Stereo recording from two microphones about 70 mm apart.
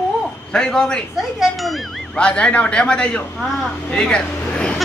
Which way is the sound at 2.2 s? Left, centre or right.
Centre.